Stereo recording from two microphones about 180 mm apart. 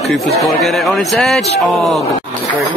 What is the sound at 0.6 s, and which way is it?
Speech, centre (ahead or behind).